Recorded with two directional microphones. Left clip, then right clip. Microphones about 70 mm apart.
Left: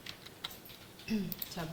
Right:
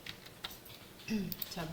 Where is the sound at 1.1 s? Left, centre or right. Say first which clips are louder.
Left 1 dB; centre.